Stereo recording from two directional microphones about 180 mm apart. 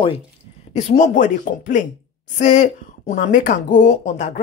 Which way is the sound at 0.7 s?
40° left (ahead or behind).